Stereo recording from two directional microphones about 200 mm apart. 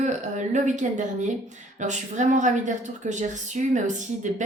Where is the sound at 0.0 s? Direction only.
35° right (ahead or behind).